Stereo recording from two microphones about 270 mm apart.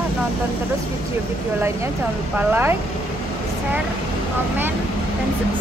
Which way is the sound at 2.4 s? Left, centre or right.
Centre.